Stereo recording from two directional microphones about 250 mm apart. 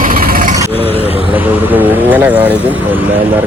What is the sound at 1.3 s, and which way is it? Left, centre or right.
Speech, centre.